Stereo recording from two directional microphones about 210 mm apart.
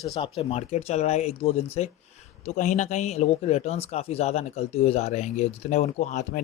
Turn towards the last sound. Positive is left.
turn(degrees=35)  # may be behind; listen again after turning